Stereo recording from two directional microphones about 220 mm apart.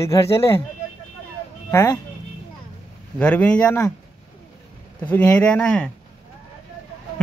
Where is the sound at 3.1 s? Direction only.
5° left (ahead or behind).